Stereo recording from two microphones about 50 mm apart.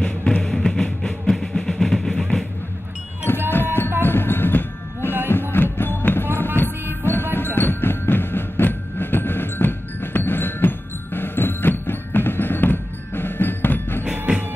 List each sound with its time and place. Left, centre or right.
0.0 s music: centre
0.4 s music: centre
3.3 s music: left
14.3 s music: right